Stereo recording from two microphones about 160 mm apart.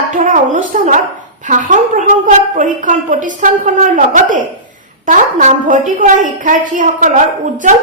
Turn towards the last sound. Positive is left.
turn(degrees=-55)  # may be behind; listen again after turning